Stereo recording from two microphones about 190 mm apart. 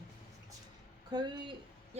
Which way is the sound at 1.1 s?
25° right (ahead or behind).